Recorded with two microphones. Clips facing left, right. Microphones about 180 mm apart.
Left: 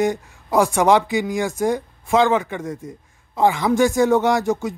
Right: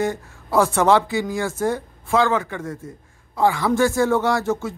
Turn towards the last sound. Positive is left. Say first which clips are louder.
# left 2 dB
turn(degrees=15)  # may be behind; listen again after turning